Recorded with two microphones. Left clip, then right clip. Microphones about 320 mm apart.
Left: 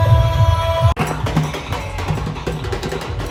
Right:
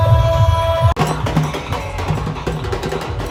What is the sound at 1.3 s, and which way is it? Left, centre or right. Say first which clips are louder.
Music: right 2 dB; centre.